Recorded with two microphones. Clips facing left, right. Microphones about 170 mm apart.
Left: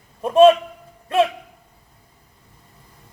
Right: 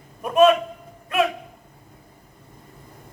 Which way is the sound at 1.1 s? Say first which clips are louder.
Left 4 dB; 30° left (ahead or behind).